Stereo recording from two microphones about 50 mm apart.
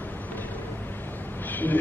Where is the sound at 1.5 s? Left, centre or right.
Left.